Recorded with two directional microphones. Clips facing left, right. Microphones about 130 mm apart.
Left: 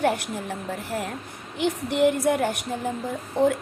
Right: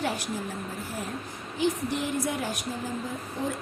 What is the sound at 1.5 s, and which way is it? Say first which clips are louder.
A woman's voice: left 3 dB; 65° left (ahead or behind).